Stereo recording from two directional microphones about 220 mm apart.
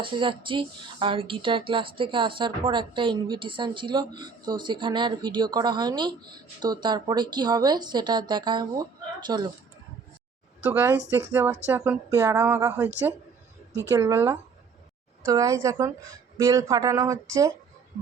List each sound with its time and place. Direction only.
0.0 s speech: 20° right (ahead or behind)
10.6 s speech: 10° right (ahead or behind)